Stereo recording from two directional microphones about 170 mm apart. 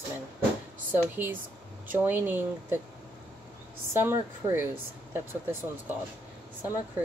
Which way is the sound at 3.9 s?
15° right (ahead or behind).